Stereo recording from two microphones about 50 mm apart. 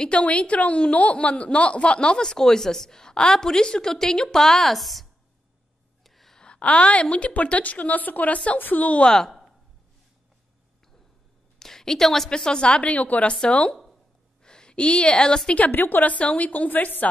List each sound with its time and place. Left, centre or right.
0.0 s a woman's voice: left; by 5.0 s centre
6.0 s gasp: centre
6.4 s a woman's voice: centre
9.0 s a woman's voice: centre
11.6 s a woman's voice: centre; by 13.3 s left
13.3 s a woman's voice: centre
15.7 s a woman's voice: left